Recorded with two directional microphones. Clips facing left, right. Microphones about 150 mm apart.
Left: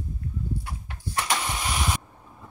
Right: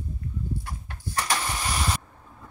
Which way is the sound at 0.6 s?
10° left (ahead or behind).